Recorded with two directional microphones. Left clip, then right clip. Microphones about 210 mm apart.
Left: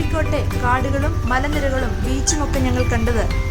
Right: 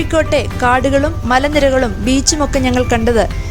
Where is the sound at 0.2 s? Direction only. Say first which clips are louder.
Right 9 dB; 35° right (ahead or behind).